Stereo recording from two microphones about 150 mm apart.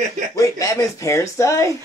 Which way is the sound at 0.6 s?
20° left (ahead or behind).